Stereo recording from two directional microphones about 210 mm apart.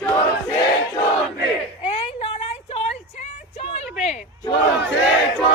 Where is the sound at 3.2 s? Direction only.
30° left (ahead or behind).